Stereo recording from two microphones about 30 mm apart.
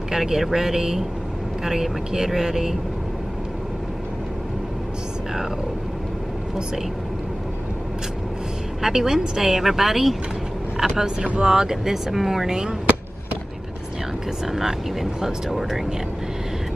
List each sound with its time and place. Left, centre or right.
0.1 s a woman's voice: centre
8.8 s a woman's voice: centre
12.4 s speech: right
14.4 s a woman's voice: centre